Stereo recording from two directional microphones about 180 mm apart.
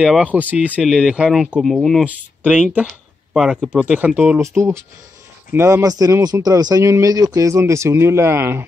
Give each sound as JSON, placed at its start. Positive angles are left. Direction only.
{"t": 0.0, "sound": "speech", "side_deg": -5}